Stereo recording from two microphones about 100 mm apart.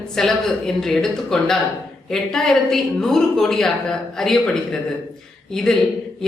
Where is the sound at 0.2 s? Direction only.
5° left (ahead or behind).